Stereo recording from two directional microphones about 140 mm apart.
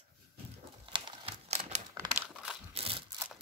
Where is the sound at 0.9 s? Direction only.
35° right (ahead or behind).